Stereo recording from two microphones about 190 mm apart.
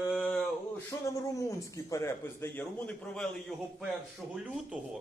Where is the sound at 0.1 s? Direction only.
5° left (ahead or behind).